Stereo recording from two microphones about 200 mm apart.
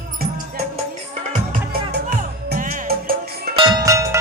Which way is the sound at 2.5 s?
45° right (ahead or behind).